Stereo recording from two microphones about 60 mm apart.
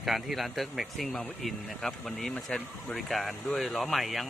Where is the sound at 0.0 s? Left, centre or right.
Centre.